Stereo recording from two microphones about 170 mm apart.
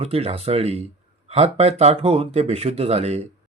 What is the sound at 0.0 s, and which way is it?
Speech, 35° right (ahead or behind).